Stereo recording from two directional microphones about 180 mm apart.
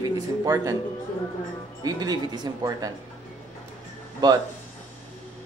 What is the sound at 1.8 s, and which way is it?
Speech, 20° right (ahead or behind).